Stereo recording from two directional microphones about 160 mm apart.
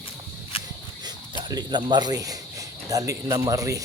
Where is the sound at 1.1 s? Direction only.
25° right (ahead or behind).